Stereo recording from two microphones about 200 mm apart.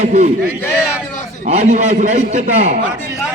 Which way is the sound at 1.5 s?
35° right (ahead or behind).